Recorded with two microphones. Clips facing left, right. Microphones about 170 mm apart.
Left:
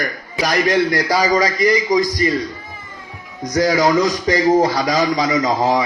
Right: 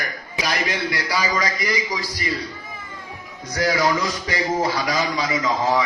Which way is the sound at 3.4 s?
40° left (ahead or behind).